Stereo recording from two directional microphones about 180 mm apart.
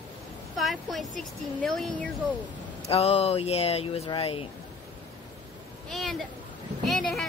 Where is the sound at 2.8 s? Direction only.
35° left (ahead or behind).